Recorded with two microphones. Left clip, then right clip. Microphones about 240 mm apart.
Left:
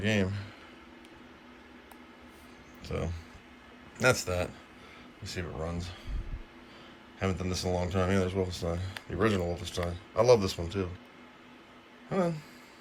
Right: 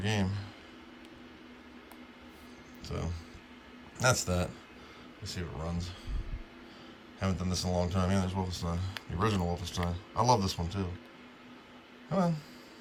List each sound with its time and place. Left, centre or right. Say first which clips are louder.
0.0 s speech: left 4 dB; centre
2.8 s speech: left 4 dB; centre
7.2 s speech: left 2 dB; centre
12.1 s speech: left 1 dB; centre